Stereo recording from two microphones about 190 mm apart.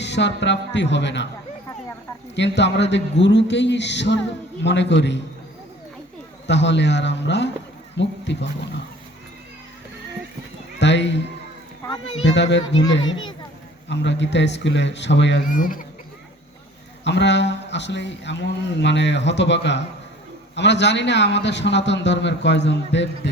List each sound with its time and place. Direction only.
0.0 s a man's voice: 65° left (ahead or behind)
2.3 s a man's voice: 65° left (ahead or behind)
6.5 s a man's voice: 65° left (ahead or behind)
10.8 s a sound: 65° left (ahead or behind)
12.2 s a man's voice: 70° left (ahead or behind)
12.9 s a child's voice: 80° left
13.8 s a man's voice: 70° left (ahead or behind)
15.4 s speech: 45° left (ahead or behind)
17.0 s a man's voice: 65° left (ahead or behind)